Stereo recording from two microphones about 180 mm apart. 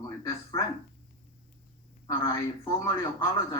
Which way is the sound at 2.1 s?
20° left (ahead or behind).